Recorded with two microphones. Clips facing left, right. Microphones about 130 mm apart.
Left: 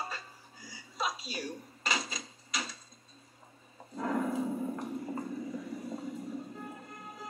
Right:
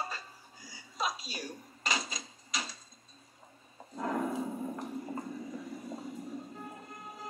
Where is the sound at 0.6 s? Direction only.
25° left (ahead or behind).